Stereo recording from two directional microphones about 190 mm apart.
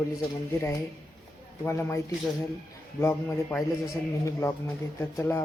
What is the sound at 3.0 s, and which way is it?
Speech, 15° left (ahead or behind).